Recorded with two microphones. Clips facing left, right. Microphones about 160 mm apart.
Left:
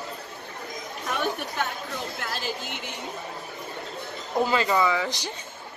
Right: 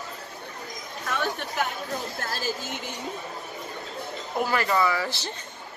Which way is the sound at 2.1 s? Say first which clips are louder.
Right 1 dB; 40° right (ahead or behind).